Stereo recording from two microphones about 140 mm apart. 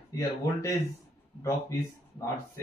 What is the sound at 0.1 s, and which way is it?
Speech, 20° left (ahead or behind).